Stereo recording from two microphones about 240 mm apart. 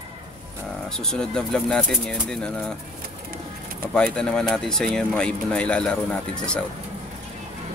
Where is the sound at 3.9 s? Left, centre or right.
Centre.